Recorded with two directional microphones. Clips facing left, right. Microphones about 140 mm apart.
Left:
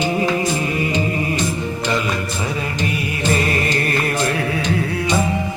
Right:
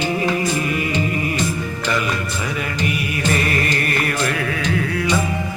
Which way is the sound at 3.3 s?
25° left (ahead or behind).